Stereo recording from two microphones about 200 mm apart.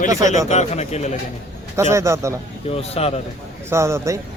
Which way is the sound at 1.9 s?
15° right (ahead or behind).